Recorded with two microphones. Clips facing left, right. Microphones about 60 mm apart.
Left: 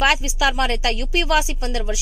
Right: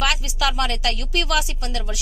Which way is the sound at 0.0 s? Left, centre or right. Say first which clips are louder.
Left 5 dB; left.